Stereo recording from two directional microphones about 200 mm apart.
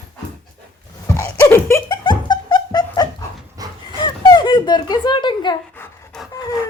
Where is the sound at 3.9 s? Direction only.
20° left (ahead or behind).